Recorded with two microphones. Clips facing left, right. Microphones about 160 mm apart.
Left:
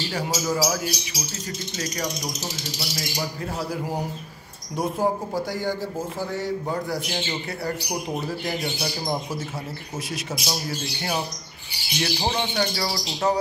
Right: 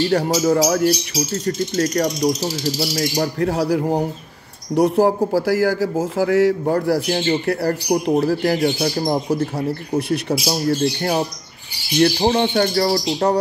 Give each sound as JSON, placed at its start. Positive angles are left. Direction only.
{"t": 0.1, "sound": "a man's voice", "side_deg": -65}
{"t": 6.6, "sound": "speech", "side_deg": -65}
{"t": 8.2, "sound": "speech", "side_deg": -90}
{"t": 9.9, "sound": "speech", "side_deg": -60}
{"t": 10.4, "sound": "speech", "side_deg": -45}